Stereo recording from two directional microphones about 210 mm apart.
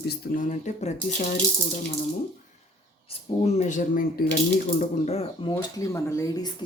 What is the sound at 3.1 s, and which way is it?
Speech, 30° left (ahead or behind).